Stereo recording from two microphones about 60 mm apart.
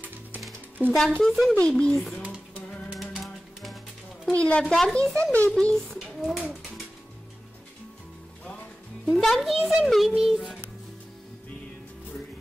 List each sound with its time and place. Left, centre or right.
0.8 s speech: right
1.2 s a child's voice: centre
1.5 s speech: centre
2.9 s music: centre
4.3 s speech: centre
5.1 s a child's voice: left
5.9 s a sound: centre
9.0 s a child's voice: centre
9.4 s a child's voice: centre